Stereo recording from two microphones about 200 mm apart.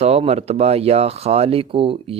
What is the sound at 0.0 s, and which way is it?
Speech, 30° right (ahead or behind).